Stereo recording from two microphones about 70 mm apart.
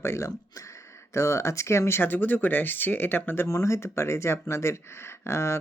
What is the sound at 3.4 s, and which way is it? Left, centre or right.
Speech, left.